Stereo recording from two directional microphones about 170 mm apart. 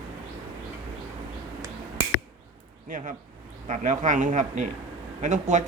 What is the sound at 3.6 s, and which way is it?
Speech, 45° right (ahead or behind).